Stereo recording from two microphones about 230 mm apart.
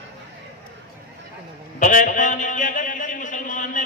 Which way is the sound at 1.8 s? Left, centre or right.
Left.